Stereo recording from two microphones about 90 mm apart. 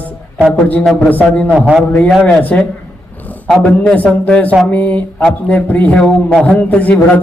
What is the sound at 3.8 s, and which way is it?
A man's voice, 15° left (ahead or behind).